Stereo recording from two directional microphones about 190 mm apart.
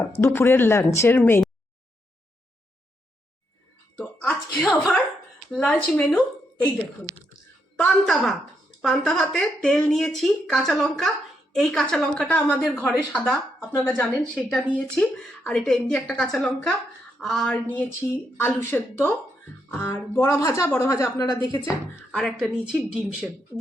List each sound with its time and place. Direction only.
0.2 s speech: 10° left (ahead or behind)
3.9 s a sound: 5° left (ahead or behind)
5.5 s a woman's voice: centre (ahead or behind)
7.8 s a woman's voice: centre (ahead or behind); by 21.6 s 20° left (ahead or behind)
22.1 s a woman's voice: centre (ahead or behind)